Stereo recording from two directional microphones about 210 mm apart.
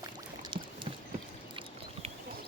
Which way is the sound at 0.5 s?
25° right (ahead or behind).